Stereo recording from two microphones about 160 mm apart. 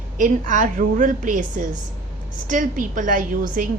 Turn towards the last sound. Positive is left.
turn(degrees=-60)  # may be behind; listen again after turning